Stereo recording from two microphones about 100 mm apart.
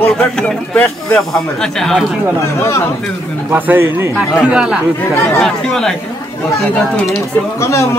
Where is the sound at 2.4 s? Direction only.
30° left (ahead or behind).